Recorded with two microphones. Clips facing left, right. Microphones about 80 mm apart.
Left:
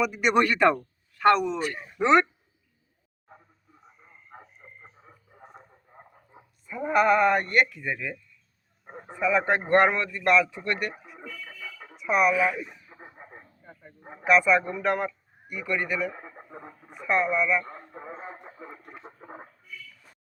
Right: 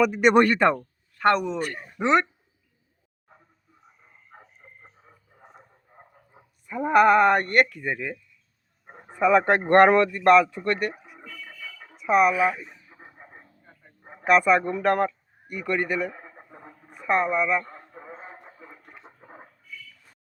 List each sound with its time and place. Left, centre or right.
0.0 s speech: right
0.4 s speech: right
1.5 s speech: right
2.0 s speech: centre
6.7 s speech: right
9.1 s speech: right
11.9 s speech: right
12.3 s speech: centre
12.5 s chicken: centre
14.3 s a man's voice: right
17.7 s radio: centre
18.6 s a sound: left